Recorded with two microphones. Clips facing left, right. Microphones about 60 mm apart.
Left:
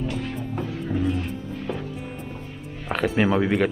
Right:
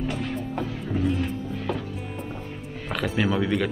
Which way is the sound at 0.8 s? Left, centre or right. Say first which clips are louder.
Left 1 dB; centre.